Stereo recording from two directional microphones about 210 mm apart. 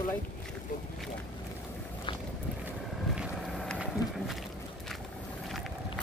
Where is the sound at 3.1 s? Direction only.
Centre (ahead or behind).